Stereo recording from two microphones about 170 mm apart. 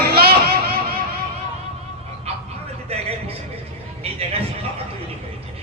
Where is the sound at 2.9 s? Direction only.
35° right (ahead or behind).